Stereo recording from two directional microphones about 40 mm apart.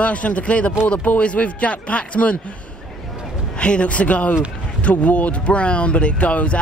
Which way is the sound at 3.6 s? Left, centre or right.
Left.